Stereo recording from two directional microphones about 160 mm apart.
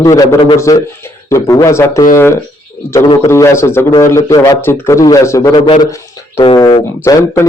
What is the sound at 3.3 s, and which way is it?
A man's voice, 15° left (ahead or behind).